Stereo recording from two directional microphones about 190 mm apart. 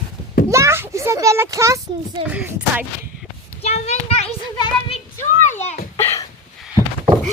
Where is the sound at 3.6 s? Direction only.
35° left (ahead or behind).